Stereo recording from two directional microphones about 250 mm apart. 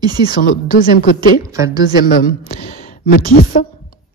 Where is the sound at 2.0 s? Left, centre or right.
Left.